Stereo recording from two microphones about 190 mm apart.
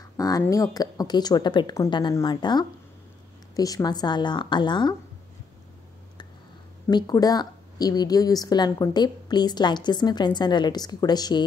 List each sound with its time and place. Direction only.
0.2 s a woman's voice: 20° left (ahead or behind)
6.9 s a woman's voice: 20° left (ahead or behind)